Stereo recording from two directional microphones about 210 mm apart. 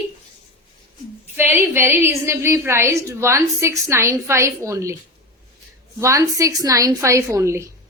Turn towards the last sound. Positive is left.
turn(degrees=-15)  # may be behind; listen again after turning